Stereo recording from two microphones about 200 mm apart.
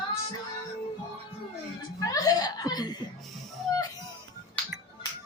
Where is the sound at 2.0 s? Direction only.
15° left (ahead or behind).